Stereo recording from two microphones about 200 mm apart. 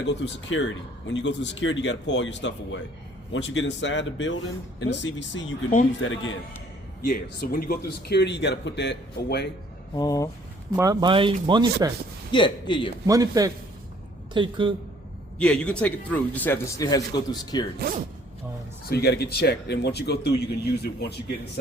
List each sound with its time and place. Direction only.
0.0 s speech: 65° left (ahead or behind)
7.0 s speech: 45° left (ahead or behind)
9.9 s a man's voice: 20° left (ahead or behind)
10.8 s speech: 20° right (ahead or behind)
12.3 s a man's voice: 25° left (ahead or behind)
13.1 s speech: 15° right (ahead or behind)
15.4 s a man's voice: 5° left (ahead or behind)
17.7 s speech: 45° right (ahead or behind)
18.9 s speech: 55° left (ahead or behind)